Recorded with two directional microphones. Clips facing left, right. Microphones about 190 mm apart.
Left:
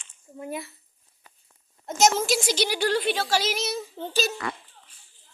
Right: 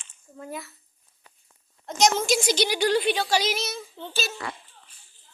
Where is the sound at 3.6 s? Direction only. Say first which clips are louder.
Left 4 dB; 40° left (ahead or behind).